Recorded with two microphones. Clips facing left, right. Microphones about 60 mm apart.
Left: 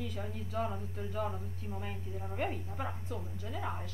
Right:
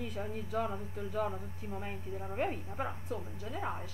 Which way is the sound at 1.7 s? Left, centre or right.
Right.